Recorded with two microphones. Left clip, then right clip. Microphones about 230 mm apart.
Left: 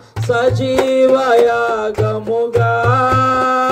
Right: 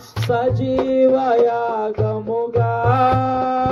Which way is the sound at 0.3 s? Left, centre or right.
Left.